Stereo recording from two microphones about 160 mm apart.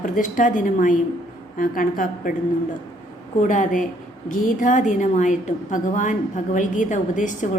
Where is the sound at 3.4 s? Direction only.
50° left (ahead or behind).